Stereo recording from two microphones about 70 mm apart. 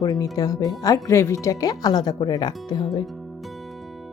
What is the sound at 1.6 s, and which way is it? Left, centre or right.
Speech, left.